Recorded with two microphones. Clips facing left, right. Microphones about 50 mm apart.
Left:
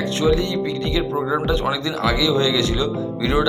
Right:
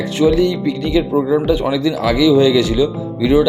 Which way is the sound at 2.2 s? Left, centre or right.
Centre.